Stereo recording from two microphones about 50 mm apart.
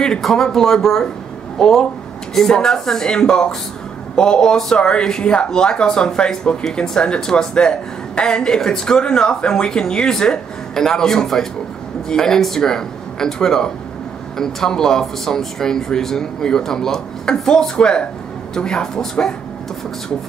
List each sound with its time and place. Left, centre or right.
0.2 s speech: centre